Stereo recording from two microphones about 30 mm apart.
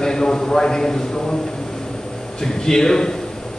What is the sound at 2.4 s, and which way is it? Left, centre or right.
Speech, centre.